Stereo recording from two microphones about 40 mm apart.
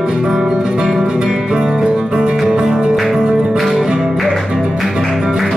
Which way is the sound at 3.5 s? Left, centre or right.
Centre.